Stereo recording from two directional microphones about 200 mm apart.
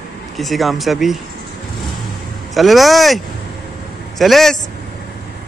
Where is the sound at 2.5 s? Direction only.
Centre (ahead or behind).